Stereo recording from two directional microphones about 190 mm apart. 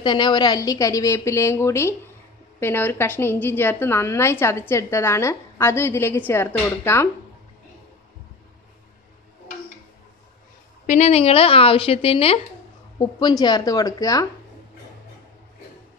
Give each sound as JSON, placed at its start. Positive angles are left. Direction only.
{"t": 0.0, "sound": "a woman's voice", "side_deg": 25}
{"t": 10.9, "sound": "a woman's voice", "side_deg": 35}